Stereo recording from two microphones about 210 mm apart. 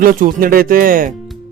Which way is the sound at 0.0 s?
40° right (ahead or behind).